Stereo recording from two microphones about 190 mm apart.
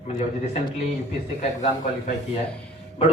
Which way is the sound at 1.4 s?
40° left (ahead or behind).